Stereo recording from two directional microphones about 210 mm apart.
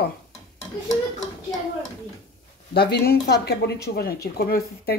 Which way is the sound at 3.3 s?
55° left (ahead or behind).